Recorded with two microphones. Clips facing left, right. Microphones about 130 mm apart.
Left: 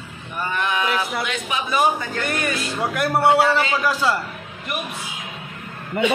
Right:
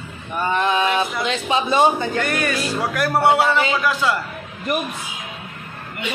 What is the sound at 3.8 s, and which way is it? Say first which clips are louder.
Speech: even; 35° left (ahead or behind).